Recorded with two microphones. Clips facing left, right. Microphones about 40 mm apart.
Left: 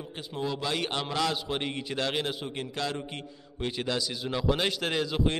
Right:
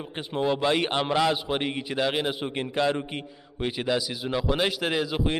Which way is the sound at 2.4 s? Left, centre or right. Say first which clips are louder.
Right 7 dB; right.